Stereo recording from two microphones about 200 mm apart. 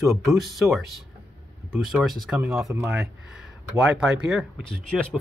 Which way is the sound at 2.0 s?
5° right (ahead or behind).